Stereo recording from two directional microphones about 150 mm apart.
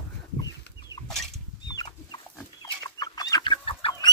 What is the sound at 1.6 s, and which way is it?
Chicken, 30° left (ahead or behind).